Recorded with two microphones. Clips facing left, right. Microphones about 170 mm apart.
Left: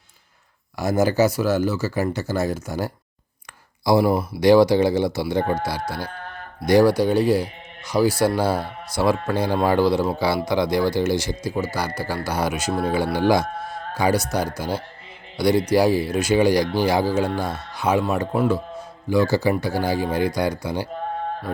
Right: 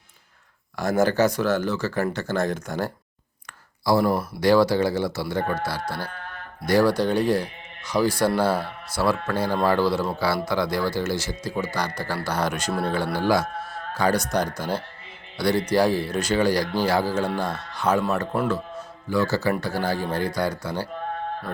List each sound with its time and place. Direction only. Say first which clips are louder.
0.8 s speech: left 2 dB; 10° left (ahead or behind)